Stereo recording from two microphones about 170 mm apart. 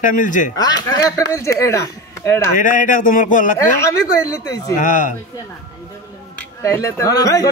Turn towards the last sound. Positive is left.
turn(degrees=20)  # may be behind; listen again after turning